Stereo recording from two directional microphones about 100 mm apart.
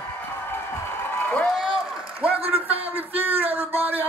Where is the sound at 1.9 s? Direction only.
15° right (ahead or behind).